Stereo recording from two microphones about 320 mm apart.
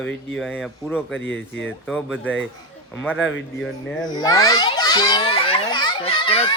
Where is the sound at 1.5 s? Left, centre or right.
Centre.